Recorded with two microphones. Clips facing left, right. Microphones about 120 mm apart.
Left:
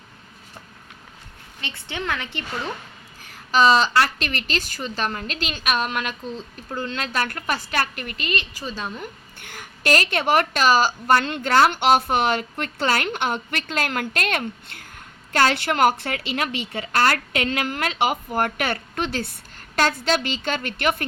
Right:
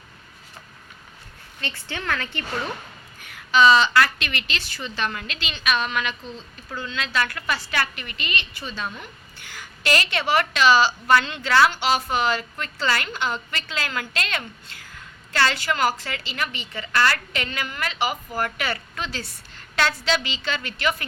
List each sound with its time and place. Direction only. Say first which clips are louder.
1.6 s a woman's voice: left 1 dB; 20° left (ahead or behind)
3.2 s a woman's voice: right 1 dB; 35° left (ahead or behind)
9.4 s a woman's voice: left 3 dB; 55° left (ahead or behind)